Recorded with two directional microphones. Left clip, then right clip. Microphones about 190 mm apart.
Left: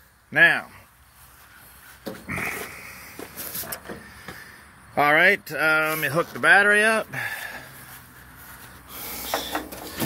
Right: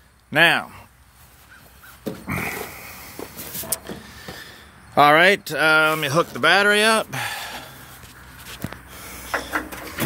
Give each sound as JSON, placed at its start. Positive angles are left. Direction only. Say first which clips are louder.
{"t": 0.3, "sound": "speech", "louder": "right 1 dB", "side_deg": -25}
{"t": 2.2, "sound": "roaring cats", "louder": "right 1 dB", "side_deg": -25}
{"t": 4.9, "sound": "speech", "louder": "right 4 dB", "side_deg": -25}
{"t": 9.0, "sound": "a sound", "louder": "right 1 dB", "side_deg": 45}